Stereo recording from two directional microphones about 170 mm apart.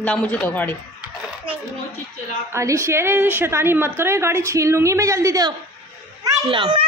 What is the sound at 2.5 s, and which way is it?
A woman's voice, 15° right (ahead or behind).